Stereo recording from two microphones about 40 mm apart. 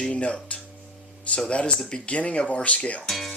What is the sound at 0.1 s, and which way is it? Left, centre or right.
Speech, left.